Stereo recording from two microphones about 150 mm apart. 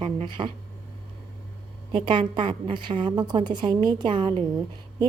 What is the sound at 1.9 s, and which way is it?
A woman's voice, 30° right (ahead or behind).